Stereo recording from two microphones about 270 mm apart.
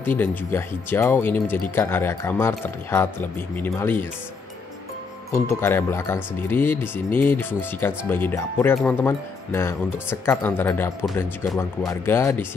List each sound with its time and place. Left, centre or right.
0.2 s speech: centre
5.3 s speech: centre